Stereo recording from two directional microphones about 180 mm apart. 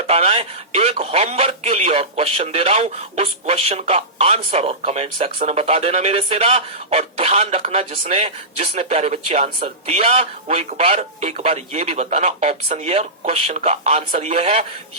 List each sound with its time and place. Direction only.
0.1 s speech: 35° right (ahead or behind)